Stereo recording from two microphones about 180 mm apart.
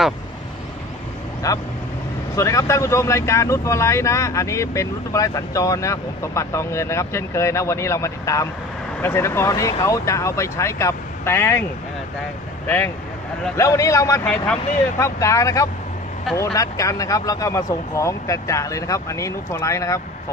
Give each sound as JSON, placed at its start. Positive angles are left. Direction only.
{"t": 1.4, "sound": "speech", "side_deg": 20}
{"t": 12.6, "sound": "speech", "side_deg": 10}